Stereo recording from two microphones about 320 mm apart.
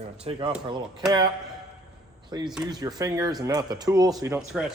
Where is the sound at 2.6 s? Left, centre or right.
Centre.